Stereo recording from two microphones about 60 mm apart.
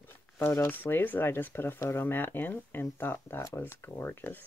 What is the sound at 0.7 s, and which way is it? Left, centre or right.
Speech, left.